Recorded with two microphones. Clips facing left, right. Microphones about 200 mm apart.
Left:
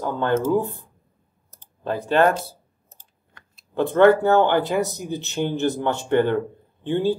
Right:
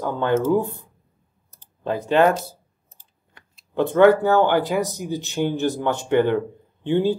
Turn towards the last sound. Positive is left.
turn(degrees=-15)  # may be behind; listen again after turning